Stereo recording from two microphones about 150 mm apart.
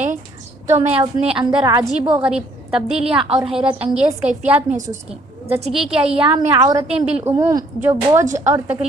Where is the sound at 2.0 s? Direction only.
10° right (ahead or behind).